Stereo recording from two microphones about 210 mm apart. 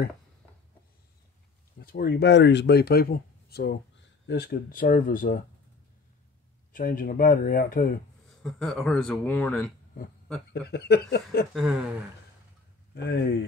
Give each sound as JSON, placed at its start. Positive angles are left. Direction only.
{"t": 1.8, "sound": "speech", "side_deg": 45}
{"t": 6.7, "sound": "speech", "side_deg": 40}
{"t": 8.4, "sound": "speech", "side_deg": 5}
{"t": 10.5, "sound": "speech", "side_deg": 50}
{"t": 11.5, "sound": "speech", "side_deg": -5}
{"t": 12.9, "sound": "speech", "side_deg": 50}